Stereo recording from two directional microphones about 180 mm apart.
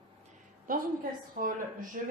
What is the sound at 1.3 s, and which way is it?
Speech, 50° right (ahead or behind).